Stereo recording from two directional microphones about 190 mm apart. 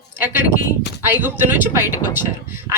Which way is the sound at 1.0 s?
10° right (ahead or behind).